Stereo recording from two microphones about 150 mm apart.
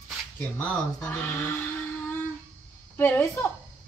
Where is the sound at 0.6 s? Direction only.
10° left (ahead or behind).